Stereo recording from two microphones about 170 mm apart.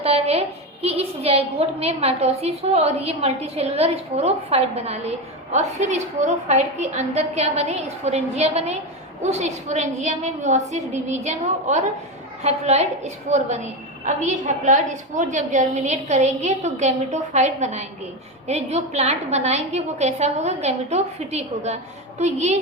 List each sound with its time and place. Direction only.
0.0 s a woman's voice: 35° right (ahead or behind)